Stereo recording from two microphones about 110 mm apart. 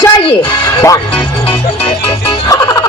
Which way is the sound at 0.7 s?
30° left (ahead or behind).